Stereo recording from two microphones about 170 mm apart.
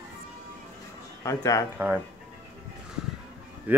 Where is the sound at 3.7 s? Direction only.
10° right (ahead or behind).